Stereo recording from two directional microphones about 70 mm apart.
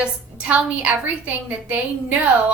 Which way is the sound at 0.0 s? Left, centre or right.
Right.